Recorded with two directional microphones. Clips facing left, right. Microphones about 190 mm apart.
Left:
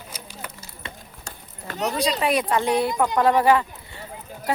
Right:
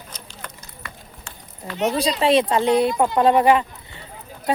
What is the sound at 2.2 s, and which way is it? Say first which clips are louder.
Speech: right 7 dB; 25° right (ahead or behind).